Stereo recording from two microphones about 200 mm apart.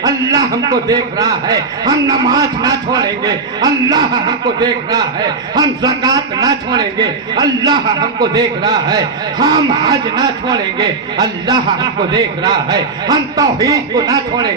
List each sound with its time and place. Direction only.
0.0 s a man's voice: 20° right (ahead or behind)